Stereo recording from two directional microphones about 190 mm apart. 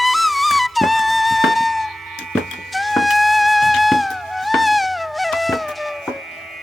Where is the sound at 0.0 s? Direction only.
Centre (ahead or behind).